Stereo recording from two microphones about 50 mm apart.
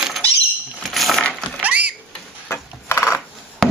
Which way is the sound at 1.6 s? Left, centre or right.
Right.